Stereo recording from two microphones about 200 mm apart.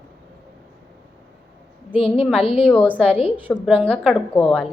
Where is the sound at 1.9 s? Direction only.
30° left (ahead or behind).